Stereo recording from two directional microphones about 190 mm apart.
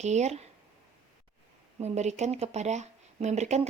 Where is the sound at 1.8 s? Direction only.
35° right (ahead or behind).